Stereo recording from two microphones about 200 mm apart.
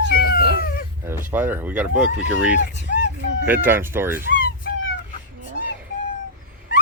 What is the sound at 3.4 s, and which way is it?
Speech, 10° right (ahead or behind).